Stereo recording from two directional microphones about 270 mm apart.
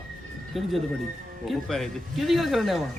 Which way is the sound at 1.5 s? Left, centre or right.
Centre.